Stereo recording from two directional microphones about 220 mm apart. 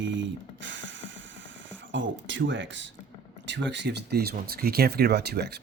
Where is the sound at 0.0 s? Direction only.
55° right (ahead or behind).